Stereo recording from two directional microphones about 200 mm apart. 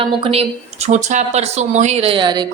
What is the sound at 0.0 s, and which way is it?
Speech, 30° right (ahead or behind).